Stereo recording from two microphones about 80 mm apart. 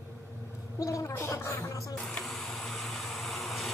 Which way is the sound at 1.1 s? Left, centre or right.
Left.